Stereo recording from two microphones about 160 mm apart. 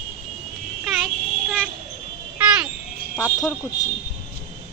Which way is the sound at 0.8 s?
Centre (ahead or behind).